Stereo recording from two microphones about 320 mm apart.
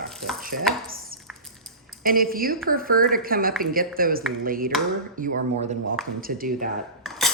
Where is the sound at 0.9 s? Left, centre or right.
Right.